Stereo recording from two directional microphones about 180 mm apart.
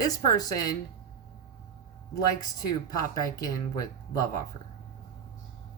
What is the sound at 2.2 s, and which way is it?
Speech, 20° left (ahead or behind).